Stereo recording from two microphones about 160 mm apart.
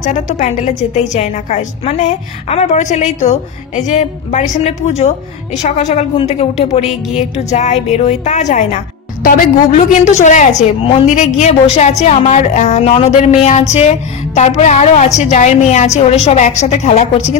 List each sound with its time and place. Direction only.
0.0 s a woman's voice: 50° left (ahead or behind)